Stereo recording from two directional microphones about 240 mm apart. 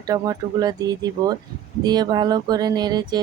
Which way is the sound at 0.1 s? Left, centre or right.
Centre.